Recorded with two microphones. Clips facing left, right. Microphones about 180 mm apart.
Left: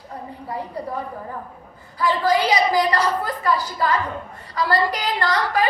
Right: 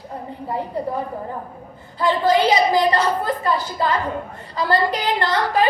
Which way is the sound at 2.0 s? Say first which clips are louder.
Right 2 dB; 25° right (ahead or behind).